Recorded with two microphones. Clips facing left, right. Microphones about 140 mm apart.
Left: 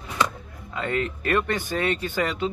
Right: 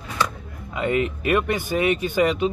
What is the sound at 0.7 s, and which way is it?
Speech, 15° right (ahead or behind).